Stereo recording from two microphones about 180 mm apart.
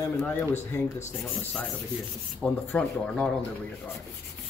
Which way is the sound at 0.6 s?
40° left (ahead or behind).